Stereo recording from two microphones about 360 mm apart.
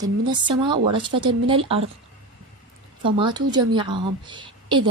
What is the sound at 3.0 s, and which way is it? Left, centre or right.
Speech, centre.